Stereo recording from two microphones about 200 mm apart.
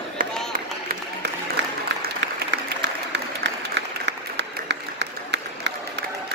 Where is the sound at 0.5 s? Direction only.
50° right (ahead or behind).